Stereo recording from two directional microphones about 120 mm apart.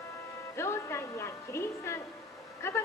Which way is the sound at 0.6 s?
20° left (ahead or behind).